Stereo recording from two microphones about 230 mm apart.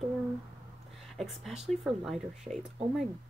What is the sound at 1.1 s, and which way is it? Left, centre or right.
Speech, centre.